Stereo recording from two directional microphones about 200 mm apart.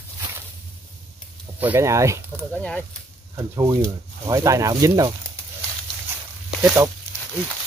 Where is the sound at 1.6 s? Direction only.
10° right (ahead or behind).